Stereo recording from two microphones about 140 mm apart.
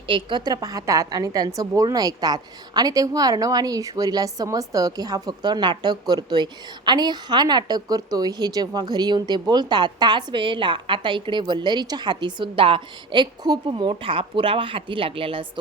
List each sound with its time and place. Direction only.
0.1 s a woman's voice: 35° right (ahead or behind)